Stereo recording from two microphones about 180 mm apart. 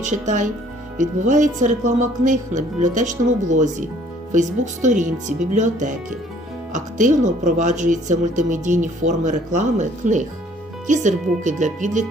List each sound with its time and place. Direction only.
0.0 s speech: 45° right (ahead or behind)